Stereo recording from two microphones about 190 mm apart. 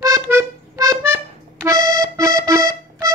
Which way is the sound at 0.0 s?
15° right (ahead or behind).